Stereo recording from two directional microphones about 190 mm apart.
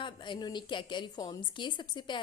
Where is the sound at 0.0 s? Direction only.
25° left (ahead or behind).